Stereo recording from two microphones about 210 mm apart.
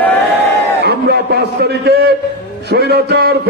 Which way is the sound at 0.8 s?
50° right (ahead or behind).